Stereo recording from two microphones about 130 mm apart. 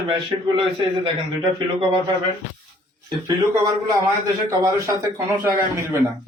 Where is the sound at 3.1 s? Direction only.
30° right (ahead or behind).